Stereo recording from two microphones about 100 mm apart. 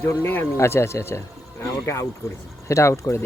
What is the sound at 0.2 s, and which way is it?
Speech, 20° left (ahead or behind).